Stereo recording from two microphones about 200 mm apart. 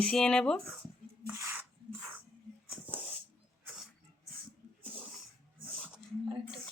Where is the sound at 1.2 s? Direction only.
15° right (ahead or behind).